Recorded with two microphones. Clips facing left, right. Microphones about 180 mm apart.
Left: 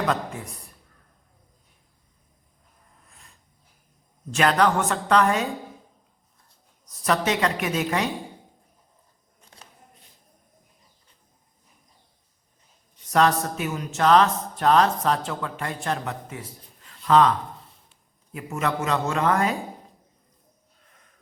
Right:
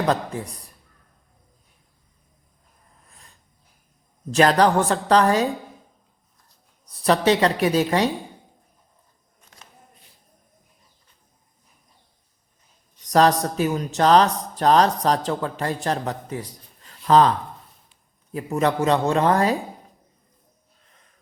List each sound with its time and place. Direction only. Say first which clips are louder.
0.0 s a man's voice: right 3 dB; 35° right (ahead or behind)
4.3 s a man's voice: right 4 dB; 35° right (ahead or behind)
6.8 s a man's voice: right 5 dB; 30° right (ahead or behind)
13.1 s a man's voice: right 3 dB; 35° right (ahead or behind)
18.3 s a man's voice: right 5 dB; 35° right (ahead or behind)